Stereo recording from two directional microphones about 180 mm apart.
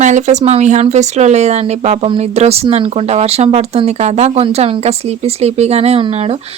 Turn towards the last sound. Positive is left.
turn(degrees=-35)  # may be behind; listen again after turning